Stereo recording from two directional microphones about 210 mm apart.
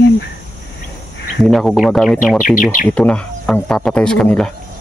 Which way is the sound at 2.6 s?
40° left (ahead or behind).